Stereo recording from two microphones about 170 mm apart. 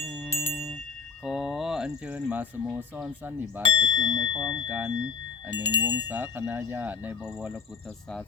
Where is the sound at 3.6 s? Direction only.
50° right (ahead or behind).